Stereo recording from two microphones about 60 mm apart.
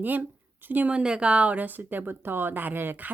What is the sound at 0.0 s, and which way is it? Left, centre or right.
Speech, right.